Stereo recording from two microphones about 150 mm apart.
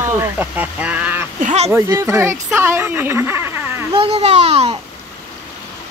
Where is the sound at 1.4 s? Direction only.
45° right (ahead or behind).